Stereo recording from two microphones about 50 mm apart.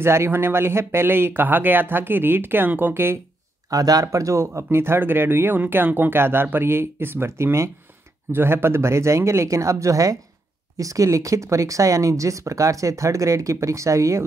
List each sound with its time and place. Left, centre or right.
0.0 s speech: right
2.9 s speech: right
4.0 s speech: right
8.3 s speech: right